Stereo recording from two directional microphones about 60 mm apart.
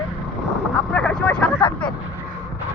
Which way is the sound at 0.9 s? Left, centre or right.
Left.